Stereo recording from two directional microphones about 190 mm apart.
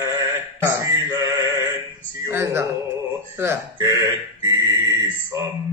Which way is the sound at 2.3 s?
15° right (ahead or behind).